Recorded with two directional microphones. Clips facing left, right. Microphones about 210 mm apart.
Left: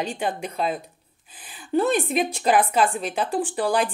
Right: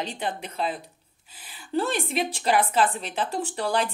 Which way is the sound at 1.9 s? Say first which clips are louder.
Left 5 dB; 15° left (ahead or behind).